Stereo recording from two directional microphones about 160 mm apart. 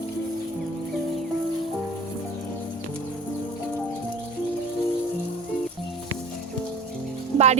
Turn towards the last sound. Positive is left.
turn(degrees=-45)  # may be behind; listen again after turning